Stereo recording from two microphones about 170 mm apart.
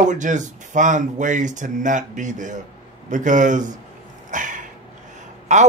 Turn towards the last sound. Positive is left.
turn(degrees=-45)  # may be behind; listen again after turning